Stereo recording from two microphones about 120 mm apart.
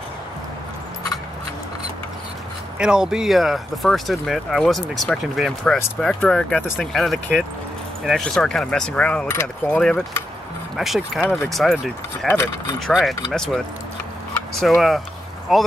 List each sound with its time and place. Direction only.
2.8 s speech: 5° right (ahead or behind); by 9.3 s 10° left (ahead or behind)
9.3 s speech: 20° left (ahead or behind)
9.8 s speech: 5° left (ahead or behind)
14.6 s speech: centre (ahead or behind)